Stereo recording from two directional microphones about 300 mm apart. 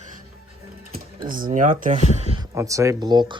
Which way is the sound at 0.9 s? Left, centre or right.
Right.